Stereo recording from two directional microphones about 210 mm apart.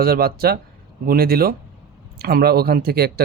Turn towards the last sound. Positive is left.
turn(degrees=-50)  # may be behind; listen again after turning